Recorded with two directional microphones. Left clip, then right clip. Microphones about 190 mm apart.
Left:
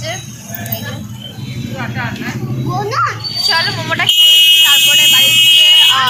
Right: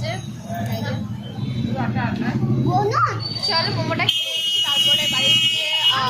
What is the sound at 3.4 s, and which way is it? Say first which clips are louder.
Speech: left 7 dB; centre (ahead or behind).